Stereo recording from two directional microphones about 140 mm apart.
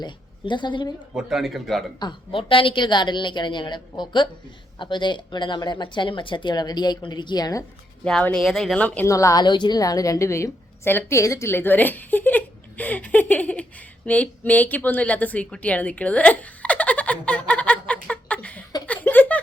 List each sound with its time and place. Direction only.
0.0 s a woman's voice: 35° left (ahead or behind)
1.1 s speech: 5° right (ahead or behind)
2.0 s speech: 35° left (ahead or behind)
8.0 s speech: 5° left (ahead or behind)
9.0 s a woman's voice: 25° left (ahead or behind)
18.9 s a sound: 15° left (ahead or behind)